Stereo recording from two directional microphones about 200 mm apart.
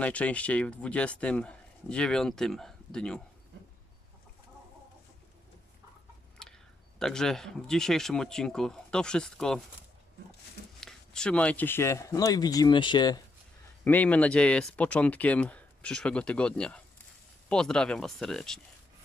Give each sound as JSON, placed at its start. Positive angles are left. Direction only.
{"t": 0.0, "sound": "speech", "side_deg": 5}
{"t": 6.4, "sound": "a sound", "side_deg": 5}
{"t": 7.0, "sound": "speech", "side_deg": 0}
{"t": 10.8, "sound": "speech", "side_deg": 5}
{"t": 13.8, "sound": "speech", "side_deg": 10}